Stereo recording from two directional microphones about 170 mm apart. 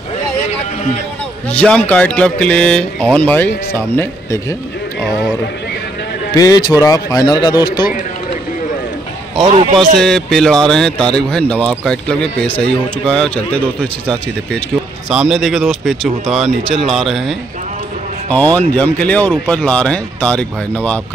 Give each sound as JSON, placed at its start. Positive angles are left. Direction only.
{"t": 1.5, "sound": "speech", "side_deg": 5}
{"t": 6.3, "sound": "speech", "side_deg": 20}
{"t": 9.4, "sound": "a man's voice", "side_deg": -40}
{"t": 9.9, "sound": "speech", "side_deg": 0}